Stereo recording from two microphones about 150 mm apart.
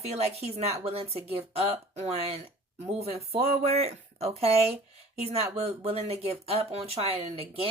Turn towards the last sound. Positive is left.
turn(degrees=-40)  # may be behind; listen again after turning